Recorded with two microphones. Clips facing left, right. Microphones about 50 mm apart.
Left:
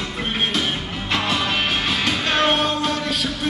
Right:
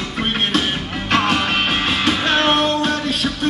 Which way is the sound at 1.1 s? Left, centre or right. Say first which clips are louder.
Right 4 dB; right.